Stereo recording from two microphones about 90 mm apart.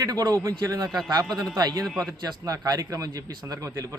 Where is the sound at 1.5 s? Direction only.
45° right (ahead or behind).